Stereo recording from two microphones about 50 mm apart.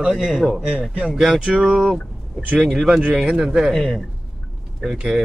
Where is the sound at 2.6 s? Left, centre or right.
Centre.